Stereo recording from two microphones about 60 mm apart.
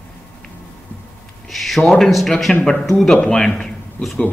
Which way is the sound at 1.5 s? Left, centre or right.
Centre.